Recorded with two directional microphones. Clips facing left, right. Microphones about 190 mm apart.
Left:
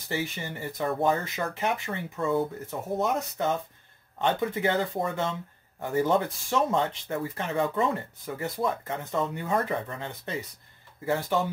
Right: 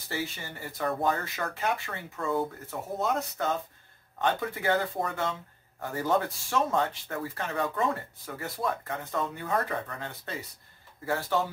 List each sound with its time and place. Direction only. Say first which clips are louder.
0.1 s speech: left 3 dB; 20° left (ahead or behind)